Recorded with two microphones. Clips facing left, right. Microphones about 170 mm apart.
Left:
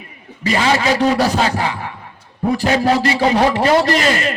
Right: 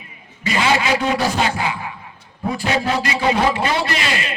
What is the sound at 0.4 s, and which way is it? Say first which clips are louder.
A man's voice: left 3 dB; 35° left (ahead or behind).